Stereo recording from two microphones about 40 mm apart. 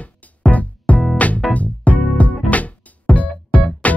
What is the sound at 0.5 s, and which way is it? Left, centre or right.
Music, left.